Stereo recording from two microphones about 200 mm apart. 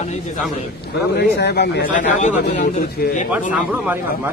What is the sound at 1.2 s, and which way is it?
Speech, 55° left (ahead or behind).